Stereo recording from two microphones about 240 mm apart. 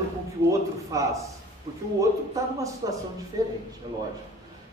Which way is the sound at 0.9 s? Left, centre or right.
Centre.